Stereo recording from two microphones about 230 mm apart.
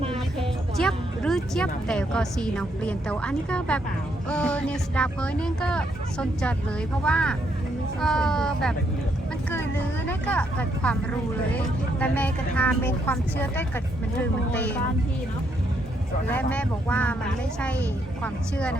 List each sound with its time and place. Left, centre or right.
0.3 s speech: centre
10.1 s speech: centre
16.3 s speech: centre
18.2 s speech: centre